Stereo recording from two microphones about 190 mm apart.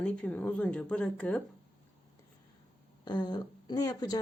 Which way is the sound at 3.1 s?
20° left (ahead or behind).